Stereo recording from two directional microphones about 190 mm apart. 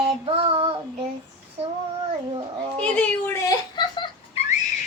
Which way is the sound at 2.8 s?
10° left (ahead or behind).